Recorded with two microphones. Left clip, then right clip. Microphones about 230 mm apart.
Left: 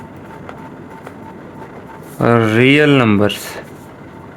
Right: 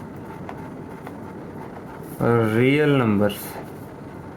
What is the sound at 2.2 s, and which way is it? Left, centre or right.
Speech, left.